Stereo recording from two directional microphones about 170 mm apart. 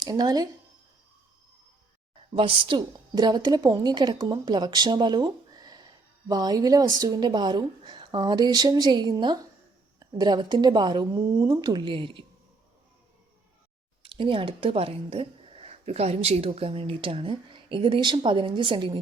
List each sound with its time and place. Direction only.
0.0 s a woman's voice: 25° right (ahead or behind)
2.3 s a woman's voice: 30° right (ahead or behind)
14.0 s speech: 30° right (ahead or behind)